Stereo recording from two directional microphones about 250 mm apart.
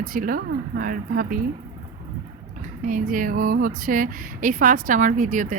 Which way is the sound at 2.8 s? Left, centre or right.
Right.